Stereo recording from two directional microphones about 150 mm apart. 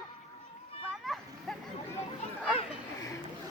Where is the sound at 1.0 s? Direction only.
Centre (ahead or behind).